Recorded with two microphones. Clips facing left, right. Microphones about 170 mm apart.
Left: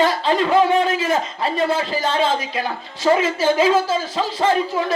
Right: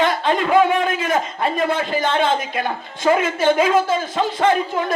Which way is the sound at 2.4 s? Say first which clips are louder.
Right 1 dB; 50° right (ahead or behind).